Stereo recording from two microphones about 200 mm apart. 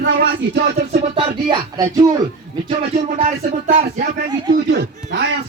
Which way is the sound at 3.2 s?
40° right (ahead or behind).